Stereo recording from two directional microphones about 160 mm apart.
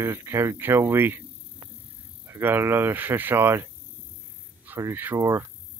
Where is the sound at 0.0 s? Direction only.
15° right (ahead or behind).